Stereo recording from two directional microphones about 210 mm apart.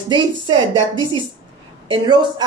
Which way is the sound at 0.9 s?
15° left (ahead or behind).